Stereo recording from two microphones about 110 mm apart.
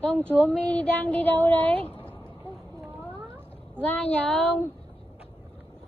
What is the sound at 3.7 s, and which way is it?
Speech, 15° left (ahead or behind).